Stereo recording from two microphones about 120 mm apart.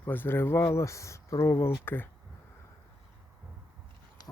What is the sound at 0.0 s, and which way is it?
Speech, 15° left (ahead or behind).